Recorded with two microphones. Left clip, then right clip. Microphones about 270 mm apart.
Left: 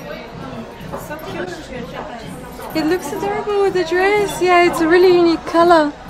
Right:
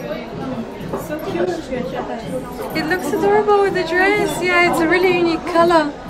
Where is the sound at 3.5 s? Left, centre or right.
Centre.